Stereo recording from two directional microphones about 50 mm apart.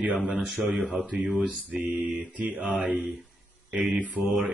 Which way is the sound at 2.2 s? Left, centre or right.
Right.